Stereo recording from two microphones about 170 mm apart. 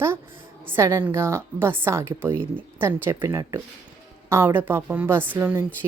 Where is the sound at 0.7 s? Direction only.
15° right (ahead or behind).